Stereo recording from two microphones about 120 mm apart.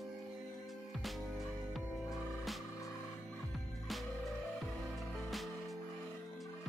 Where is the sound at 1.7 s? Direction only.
Centre (ahead or behind).